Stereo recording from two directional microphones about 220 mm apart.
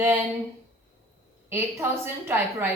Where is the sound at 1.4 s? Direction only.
10° right (ahead or behind).